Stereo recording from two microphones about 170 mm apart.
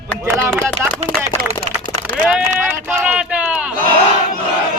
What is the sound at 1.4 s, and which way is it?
Speech, 60° right (ahead or behind).